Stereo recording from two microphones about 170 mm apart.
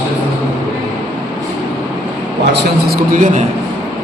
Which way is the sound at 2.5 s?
65° right (ahead or behind).